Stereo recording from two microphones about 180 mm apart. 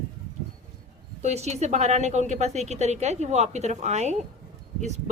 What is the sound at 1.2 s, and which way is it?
A woman's voice, 40° right (ahead or behind).